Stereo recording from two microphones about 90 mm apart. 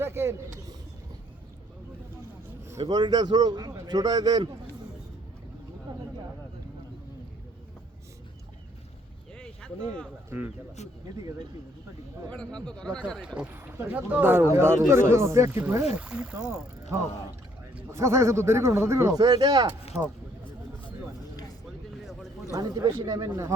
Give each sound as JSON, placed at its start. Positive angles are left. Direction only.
{"t": 0.0, "sound": "speech", "side_deg": -25}
{"t": 2.8, "sound": "speech", "side_deg": -50}
{"t": 9.4, "sound": "a sound", "side_deg": 10}
{"t": 10.2, "sound": "speech", "side_deg": -25}
{"t": 12.5, "sound": "speech", "side_deg": 10}
{"t": 13.2, "sound": "speech", "side_deg": -10}
{"t": 13.5, "sound": "speech", "side_deg": -20}
{"t": 15.8, "sound": "speech", "side_deg": -10}
{"t": 17.9, "sound": "speech", "side_deg": -35}
{"t": 22.5, "sound": "speech", "side_deg": -40}